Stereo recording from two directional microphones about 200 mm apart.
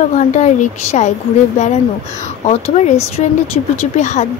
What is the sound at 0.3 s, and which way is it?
Speech, 35° left (ahead or behind).